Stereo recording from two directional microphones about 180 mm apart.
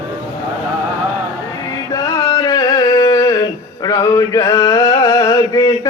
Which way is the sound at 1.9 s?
20° left (ahead or behind).